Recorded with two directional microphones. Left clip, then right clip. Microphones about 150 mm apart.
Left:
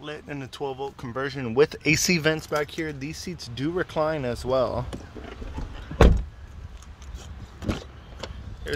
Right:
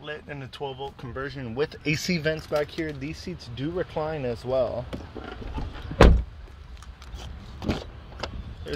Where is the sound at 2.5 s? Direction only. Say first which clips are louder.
Even; 45° left (ahead or behind).